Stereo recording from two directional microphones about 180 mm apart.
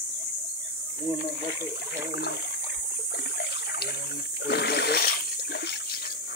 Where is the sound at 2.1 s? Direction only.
65° left (ahead or behind).